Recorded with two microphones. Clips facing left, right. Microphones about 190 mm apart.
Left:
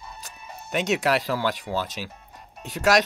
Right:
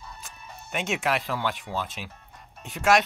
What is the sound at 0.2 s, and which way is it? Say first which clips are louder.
Speech: left 3 dB; 40° left (ahead or behind).